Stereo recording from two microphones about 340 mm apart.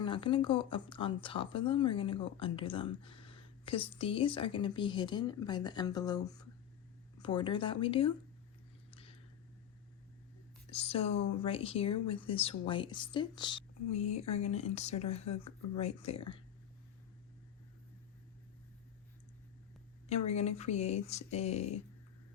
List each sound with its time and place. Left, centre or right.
0.0 s speech: centre
10.7 s speech: centre
20.1 s speech: centre